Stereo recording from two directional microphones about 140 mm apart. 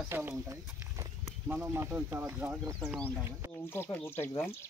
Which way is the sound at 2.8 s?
5° left (ahead or behind).